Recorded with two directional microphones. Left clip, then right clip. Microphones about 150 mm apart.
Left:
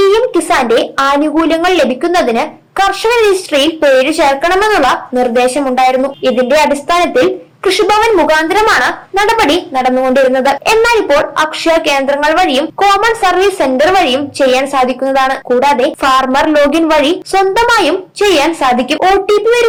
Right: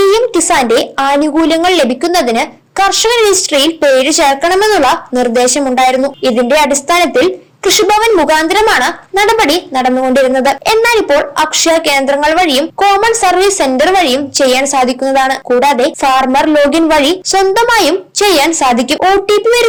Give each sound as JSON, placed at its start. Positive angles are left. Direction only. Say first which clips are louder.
{"t": 0.0, "sound": "a woman's voice", "louder": "even", "side_deg": -40}
{"t": 8.1, "sound": "a woman's voice", "louder": "even", "side_deg": -30}
{"t": 8.4, "sound": "a woman's voice", "louder": "even", "side_deg": -45}